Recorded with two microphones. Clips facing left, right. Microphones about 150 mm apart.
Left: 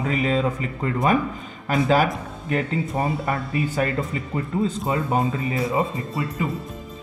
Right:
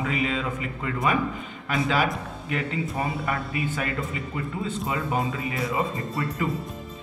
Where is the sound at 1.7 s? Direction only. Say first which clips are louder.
Left 5 dB; 45° left (ahead or behind).